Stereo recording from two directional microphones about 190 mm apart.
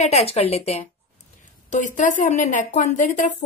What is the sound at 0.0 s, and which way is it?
A woman's voice, 35° left (ahead or behind).